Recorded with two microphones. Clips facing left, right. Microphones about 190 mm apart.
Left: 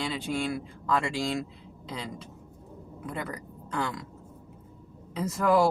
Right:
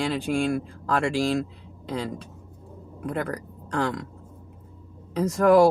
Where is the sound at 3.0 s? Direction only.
60° right (ahead or behind).